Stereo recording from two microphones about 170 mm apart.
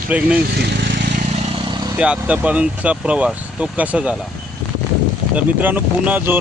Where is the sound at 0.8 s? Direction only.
80° right.